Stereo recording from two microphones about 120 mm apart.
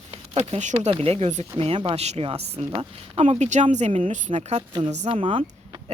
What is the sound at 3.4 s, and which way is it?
Speech, 80° right.